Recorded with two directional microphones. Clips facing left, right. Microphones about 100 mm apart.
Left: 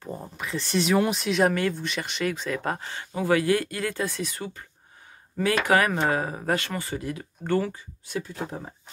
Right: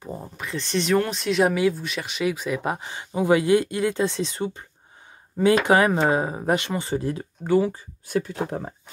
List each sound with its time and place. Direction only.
0.2 s speech: centre (ahead or behind); by 6.9 s 20° right (ahead or behind)
6.9 s speech: 30° right (ahead or behind)
7.4 s speech: 10° right (ahead or behind)
8.1 s speech: 60° right (ahead or behind)